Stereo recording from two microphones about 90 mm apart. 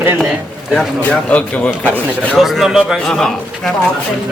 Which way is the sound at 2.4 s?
Centre (ahead or behind).